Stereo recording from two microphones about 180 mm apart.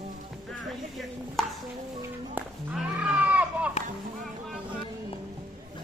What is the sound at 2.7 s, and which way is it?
Goat, 5° right (ahead or behind).